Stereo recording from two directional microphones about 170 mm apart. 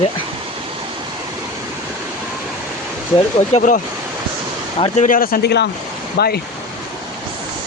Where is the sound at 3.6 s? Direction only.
50° left (ahead or behind).